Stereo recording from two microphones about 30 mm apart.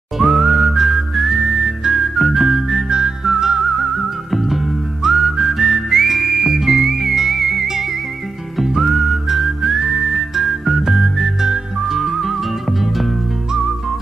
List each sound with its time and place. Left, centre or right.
0.2 s whistling: centre
2.9 s whistling: right
3.4 s music: centre
5.0 s whistling: centre
6.6 s music: centre
8.5 s whistling: centre
10.1 s music: centre